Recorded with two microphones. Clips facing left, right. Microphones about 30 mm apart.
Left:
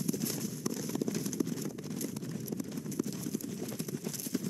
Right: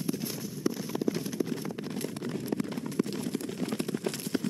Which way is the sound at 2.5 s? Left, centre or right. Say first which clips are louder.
Right 6 dB; right.